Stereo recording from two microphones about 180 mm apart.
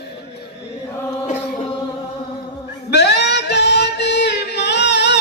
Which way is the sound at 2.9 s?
70° left (ahead or behind).